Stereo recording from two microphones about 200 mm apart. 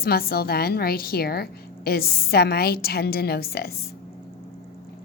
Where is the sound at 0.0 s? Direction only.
50° left (ahead or behind).